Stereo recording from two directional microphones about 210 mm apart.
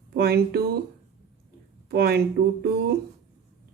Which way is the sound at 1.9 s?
50° right (ahead or behind).